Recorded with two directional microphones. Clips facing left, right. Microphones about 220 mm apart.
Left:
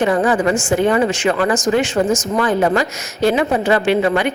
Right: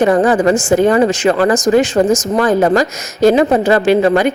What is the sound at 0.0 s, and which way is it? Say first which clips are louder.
Speech: right 4 dB; 35° right (ahead or behind).